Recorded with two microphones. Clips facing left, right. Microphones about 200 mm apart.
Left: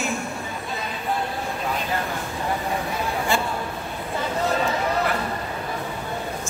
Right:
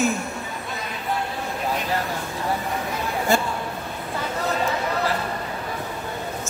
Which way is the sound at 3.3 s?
40° right (ahead or behind).